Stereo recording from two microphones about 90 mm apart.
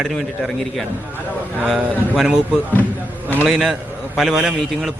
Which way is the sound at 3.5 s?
5° right (ahead or behind).